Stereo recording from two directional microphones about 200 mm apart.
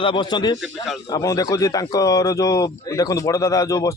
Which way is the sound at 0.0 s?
25° left (ahead or behind).